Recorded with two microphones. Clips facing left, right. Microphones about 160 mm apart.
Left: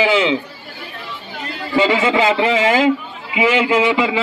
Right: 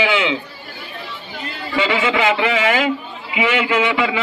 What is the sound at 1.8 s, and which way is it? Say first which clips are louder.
A man's voice: left 3 dB; 30° left (ahead or behind).